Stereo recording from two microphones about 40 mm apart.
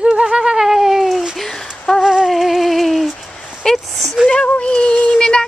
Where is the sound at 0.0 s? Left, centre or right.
Centre.